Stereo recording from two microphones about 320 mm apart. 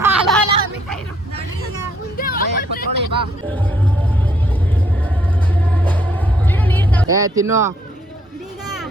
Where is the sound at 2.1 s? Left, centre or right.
Left.